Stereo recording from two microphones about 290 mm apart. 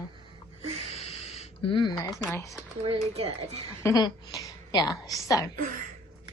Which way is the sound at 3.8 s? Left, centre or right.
Centre.